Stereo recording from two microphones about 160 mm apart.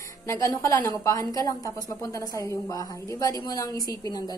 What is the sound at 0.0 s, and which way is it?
A woman's voice, 20° left (ahead or behind).